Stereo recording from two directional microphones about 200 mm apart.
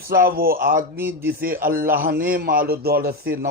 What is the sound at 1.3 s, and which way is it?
Speech, 45° right (ahead or behind).